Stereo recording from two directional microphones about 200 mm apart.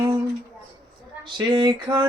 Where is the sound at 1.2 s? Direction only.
20° right (ahead or behind).